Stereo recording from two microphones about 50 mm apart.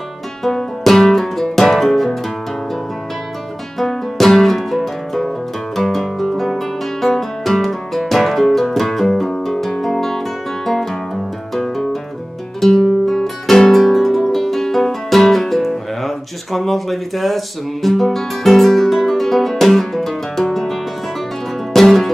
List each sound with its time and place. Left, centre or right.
0.4 s music: centre
3.7 s music: centre
5.8 s guitar: centre
11.5 s music: centre